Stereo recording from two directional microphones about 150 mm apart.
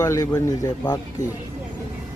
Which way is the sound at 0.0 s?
20° left (ahead or behind).